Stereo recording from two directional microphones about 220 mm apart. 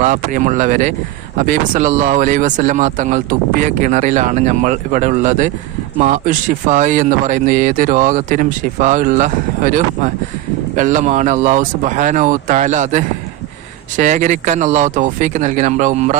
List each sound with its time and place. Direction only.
0.0 s speech: 35° right (ahead or behind)